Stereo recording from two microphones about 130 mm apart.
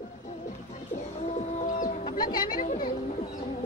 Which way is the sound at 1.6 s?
70° left (ahead or behind).